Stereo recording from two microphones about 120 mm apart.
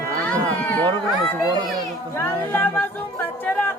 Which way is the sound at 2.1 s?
15° left (ahead or behind).